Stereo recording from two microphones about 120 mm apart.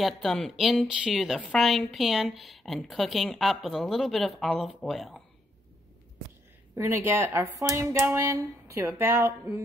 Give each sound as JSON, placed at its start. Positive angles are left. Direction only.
{"t": 0.0, "sound": "a woman's voice", "side_deg": 0}
{"t": 6.7, "sound": "speech", "side_deg": -20}